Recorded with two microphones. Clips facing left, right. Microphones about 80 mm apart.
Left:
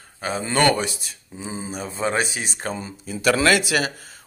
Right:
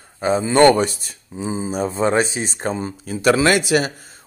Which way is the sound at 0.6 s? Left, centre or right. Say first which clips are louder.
Right 7 dB; right.